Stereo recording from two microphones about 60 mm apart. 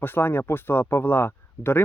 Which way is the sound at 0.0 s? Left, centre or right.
Left.